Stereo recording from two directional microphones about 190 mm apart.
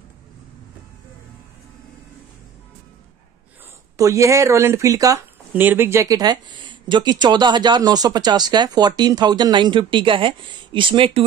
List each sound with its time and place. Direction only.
3.9 s speech: 15° right (ahead or behind)